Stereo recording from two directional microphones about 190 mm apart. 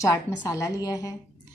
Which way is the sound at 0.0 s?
15° left (ahead or behind).